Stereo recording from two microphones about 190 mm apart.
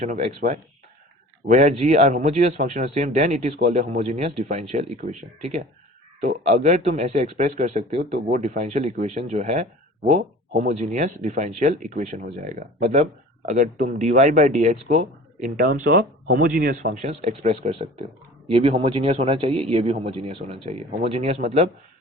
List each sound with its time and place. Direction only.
0.0 s a man's voice: 40° right (ahead or behind)
6.1 s a man's voice: 40° right (ahead or behind)